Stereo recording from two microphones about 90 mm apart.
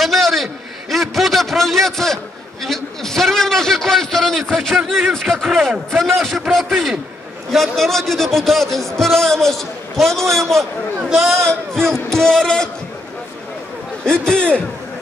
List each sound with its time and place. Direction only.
0.0 s a man's voice: centre (ahead or behind)
14.0 s a man's voice: 10° left (ahead or behind)